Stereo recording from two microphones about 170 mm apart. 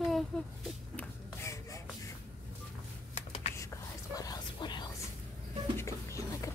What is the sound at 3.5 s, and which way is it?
Whispering, 20° left (ahead or behind).